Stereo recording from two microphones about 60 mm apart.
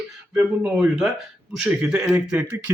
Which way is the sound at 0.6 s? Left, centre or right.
Centre.